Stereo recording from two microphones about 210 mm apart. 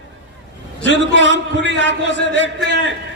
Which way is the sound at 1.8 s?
60° left (ahead or behind).